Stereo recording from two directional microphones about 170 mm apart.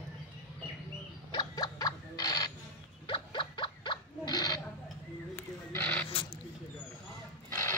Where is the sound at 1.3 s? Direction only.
25° left (ahead or behind).